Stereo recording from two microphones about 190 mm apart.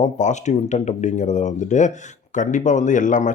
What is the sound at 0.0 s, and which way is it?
Speech, 40° left (ahead or behind).